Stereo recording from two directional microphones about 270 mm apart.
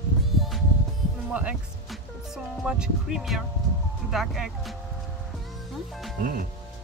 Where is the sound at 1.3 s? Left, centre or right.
Centre.